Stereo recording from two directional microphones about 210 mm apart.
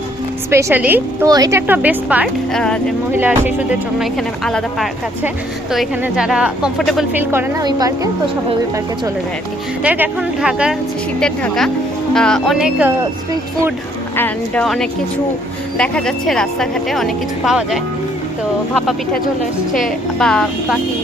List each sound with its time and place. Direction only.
0.5 s a woman's voice: 10° right (ahead or behind)
3.2 s a woman's voice: 10° right (ahead or behind)
7.3 s a woman's voice: 15° right (ahead or behind)
9.8 s a woman's voice: 5° right (ahead or behind)
14.2 s a woman's voice: 5° left (ahead or behind)